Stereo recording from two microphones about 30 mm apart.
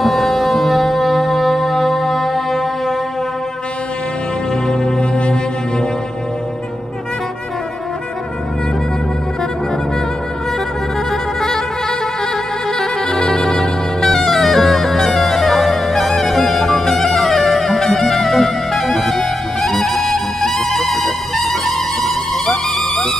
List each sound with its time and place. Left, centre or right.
0.0 s music: centre
4.6 s music: centre
5.1 s music: left
11.1 s music: centre
12.7 s music: centre